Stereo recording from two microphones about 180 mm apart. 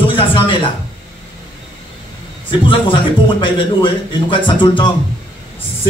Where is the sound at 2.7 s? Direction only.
30° left (ahead or behind).